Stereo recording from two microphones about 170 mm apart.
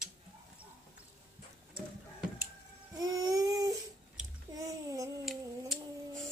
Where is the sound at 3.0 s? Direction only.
20° right (ahead or behind).